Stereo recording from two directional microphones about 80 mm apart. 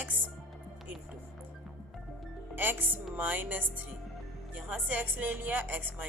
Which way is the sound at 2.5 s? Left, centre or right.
Right.